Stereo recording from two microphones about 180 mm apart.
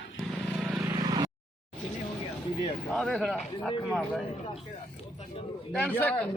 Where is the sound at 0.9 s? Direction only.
20° right (ahead or behind).